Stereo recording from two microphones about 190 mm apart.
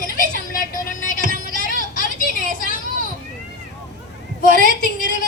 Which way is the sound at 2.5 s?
45° left (ahead or behind).